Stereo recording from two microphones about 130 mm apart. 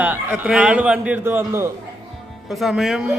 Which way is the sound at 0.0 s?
15° right (ahead or behind).